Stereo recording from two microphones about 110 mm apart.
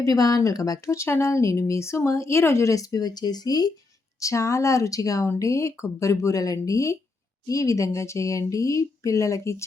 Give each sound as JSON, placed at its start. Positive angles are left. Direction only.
{"t": 0.0, "sound": "speech", "side_deg": 35}